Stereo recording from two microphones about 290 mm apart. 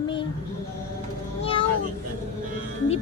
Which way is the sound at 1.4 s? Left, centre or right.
Centre.